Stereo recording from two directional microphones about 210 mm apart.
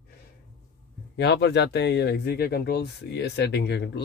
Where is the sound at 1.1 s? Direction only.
55° left (ahead or behind).